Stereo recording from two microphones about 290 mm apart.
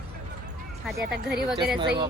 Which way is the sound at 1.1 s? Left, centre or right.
Right.